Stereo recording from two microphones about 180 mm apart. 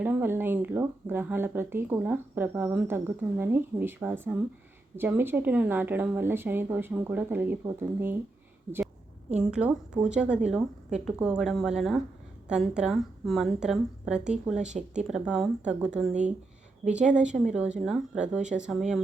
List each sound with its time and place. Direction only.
0.0 s speech: 10° right (ahead or behind)
9.3 s a woman's voice: 5° right (ahead or behind)
14.7 s speech: 40° right (ahead or behind)
15.0 s a woman's voice: 5° right (ahead or behind)